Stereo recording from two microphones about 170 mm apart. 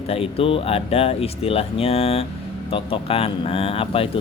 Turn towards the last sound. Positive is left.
turn(degrees=35)  # may be behind; listen again after turning